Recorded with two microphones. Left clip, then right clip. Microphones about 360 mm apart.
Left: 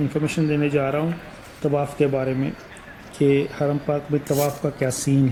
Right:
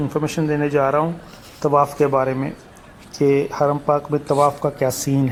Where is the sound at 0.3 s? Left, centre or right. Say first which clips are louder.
Right 3 dB; right.